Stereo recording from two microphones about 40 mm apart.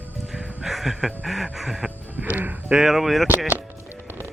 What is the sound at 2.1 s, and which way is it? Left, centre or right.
Speech, right.